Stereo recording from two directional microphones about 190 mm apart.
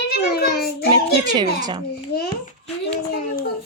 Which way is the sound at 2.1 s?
55° left (ahead or behind).